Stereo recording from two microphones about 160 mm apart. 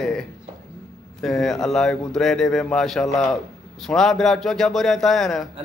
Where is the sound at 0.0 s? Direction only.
5° left (ahead or behind).